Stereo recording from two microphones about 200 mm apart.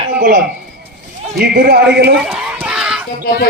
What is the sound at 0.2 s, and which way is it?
A man's voice, 50° right (ahead or behind).